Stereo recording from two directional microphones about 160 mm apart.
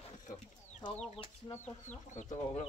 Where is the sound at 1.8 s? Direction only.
50° left (ahead or behind).